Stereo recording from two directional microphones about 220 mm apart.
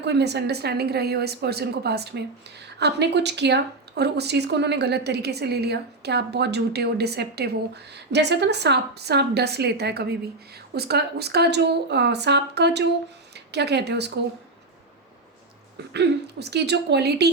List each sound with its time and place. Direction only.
0.0 s speech: 50° right (ahead or behind)
15.9 s speech: 50° right (ahead or behind)